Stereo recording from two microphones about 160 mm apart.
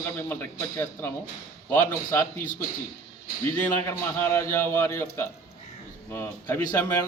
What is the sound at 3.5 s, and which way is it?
A man's voice, 15° left (ahead or behind).